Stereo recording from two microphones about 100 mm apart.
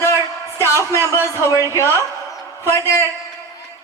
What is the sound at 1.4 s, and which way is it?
A woman's voice, 35° left (ahead or behind).